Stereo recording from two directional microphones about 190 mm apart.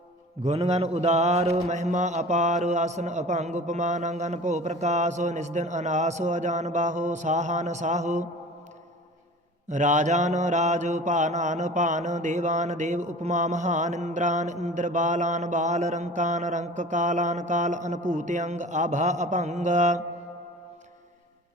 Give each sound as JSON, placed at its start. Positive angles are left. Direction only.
{"t": 0.4, "sound": "mantra", "side_deg": -35}
{"t": 9.6, "sound": "mantra", "side_deg": -40}